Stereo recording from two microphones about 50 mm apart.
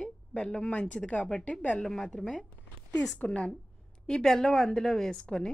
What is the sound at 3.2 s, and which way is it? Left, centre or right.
Speech, left.